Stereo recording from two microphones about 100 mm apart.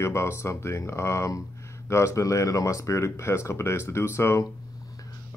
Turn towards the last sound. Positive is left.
turn(degrees=25)  # may be behind; listen again after turning